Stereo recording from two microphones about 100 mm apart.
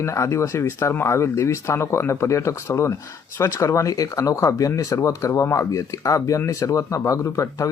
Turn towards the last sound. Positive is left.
turn(degrees=30)  # may be behind; listen again after turning